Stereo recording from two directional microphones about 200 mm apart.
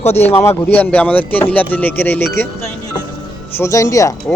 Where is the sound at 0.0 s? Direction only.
30° left (ahead or behind).